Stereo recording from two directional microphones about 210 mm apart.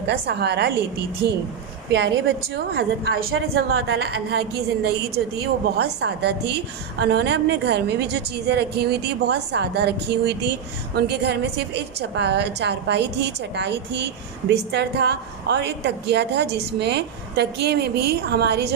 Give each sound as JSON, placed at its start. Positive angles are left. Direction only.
{"t": 0.0, "sound": "a woman's voice", "side_deg": -55}
{"t": 1.9, "sound": "a woman's voice", "side_deg": -60}
{"t": 3.8, "sound": "a woman's voice", "side_deg": -75}
{"t": 4.1, "sound": "a woman's voice", "side_deg": -50}